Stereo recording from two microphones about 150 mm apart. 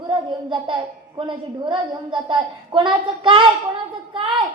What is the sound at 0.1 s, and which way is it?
A child's voice, 30° right (ahead or behind).